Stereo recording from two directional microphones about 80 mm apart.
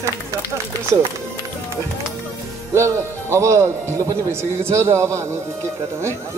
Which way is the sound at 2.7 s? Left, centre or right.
Right.